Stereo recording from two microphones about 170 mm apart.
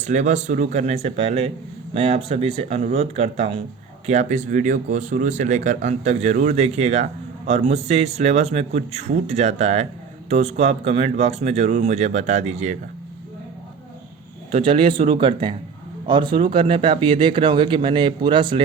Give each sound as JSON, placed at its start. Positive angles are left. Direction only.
{"t": 0.0, "sound": "speech", "side_deg": -45}
{"t": 14.5, "sound": "speech", "side_deg": -35}